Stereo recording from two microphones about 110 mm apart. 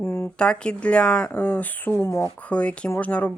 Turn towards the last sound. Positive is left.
turn(degrees=10)  # may be behind; listen again after turning